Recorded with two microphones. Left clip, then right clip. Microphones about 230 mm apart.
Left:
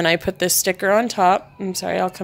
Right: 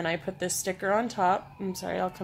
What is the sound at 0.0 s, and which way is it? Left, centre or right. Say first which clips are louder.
Speech: left 12 dB; left.